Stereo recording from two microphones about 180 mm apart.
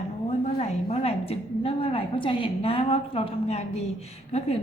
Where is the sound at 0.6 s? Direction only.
35° left (ahead or behind).